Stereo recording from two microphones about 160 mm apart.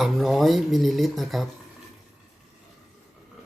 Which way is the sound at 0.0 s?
Centre (ahead or behind).